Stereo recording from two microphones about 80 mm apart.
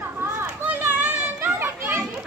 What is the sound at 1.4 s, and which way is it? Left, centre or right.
Children playing, right.